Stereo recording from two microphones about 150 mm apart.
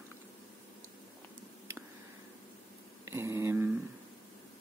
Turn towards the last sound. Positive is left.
turn(degrees=-15)  # may be behind; listen again after turning